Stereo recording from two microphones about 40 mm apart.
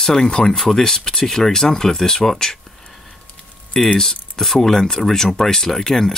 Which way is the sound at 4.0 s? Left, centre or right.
Centre.